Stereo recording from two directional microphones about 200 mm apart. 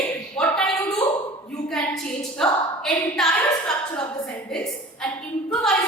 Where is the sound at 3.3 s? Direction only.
15° left (ahead or behind).